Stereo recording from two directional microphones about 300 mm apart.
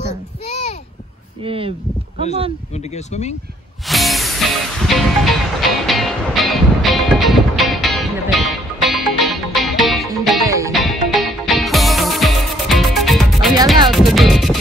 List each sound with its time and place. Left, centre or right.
1.4 s speech: centre
2.7 s speech: left
3.8 s music: centre
10.7 s music: centre
13.8 s speech: centre